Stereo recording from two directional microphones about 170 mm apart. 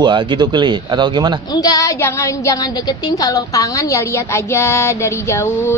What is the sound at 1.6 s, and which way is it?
A woman's voice, 20° left (ahead or behind).